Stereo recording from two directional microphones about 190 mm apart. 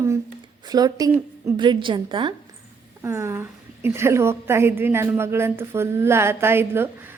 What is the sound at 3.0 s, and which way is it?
A woman's voice, 15° right (ahead or behind).